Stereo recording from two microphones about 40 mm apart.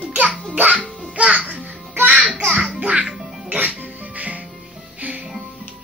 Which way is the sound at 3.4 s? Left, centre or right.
Right.